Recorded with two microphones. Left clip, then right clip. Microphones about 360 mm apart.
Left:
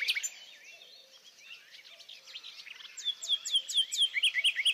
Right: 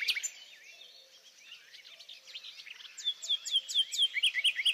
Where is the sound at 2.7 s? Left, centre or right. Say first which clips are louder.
Even; left.